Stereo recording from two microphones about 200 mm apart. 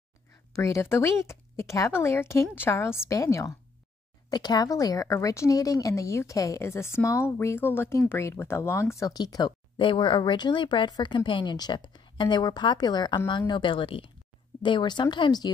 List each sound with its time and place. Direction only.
0.5 s speech: 15° left (ahead or behind)